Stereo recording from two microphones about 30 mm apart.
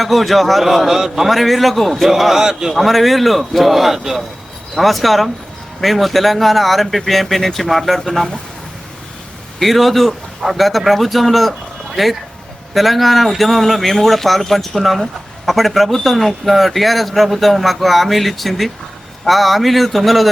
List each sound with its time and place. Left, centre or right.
0.0 s a man's voice: centre
1.3 s a man's voice: centre
2.7 s speech: centre
4.8 s speech: centre
9.6 s speech: centre